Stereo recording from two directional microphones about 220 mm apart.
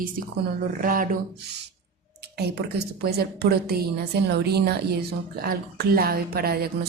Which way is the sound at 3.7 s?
50° right (ahead or behind).